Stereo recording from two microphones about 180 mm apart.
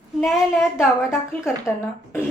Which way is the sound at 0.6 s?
15° left (ahead or behind).